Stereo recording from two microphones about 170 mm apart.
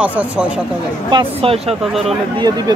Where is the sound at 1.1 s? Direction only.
35° right (ahead or behind).